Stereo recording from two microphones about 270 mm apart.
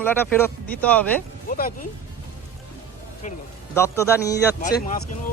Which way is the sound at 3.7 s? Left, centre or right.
Centre.